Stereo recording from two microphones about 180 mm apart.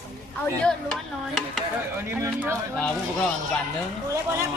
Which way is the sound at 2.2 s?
15° right (ahead or behind).